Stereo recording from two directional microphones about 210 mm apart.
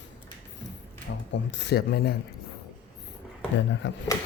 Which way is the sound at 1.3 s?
55° left (ahead or behind).